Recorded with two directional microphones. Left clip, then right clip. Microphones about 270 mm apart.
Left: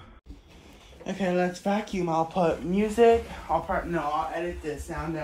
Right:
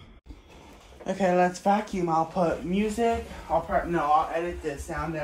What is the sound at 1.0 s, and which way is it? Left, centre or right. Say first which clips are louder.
Speech: right 4 dB; centre.